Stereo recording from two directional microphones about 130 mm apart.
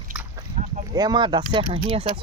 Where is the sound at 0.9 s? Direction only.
30° right (ahead or behind).